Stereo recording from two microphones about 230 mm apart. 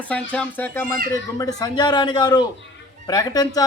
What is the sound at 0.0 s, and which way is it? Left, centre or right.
A man's voice, centre.